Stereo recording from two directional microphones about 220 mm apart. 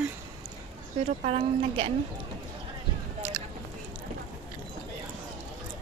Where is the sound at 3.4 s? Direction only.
10° right (ahead or behind).